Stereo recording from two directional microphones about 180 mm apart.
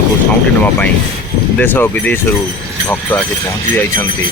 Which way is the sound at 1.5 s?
10° left (ahead or behind).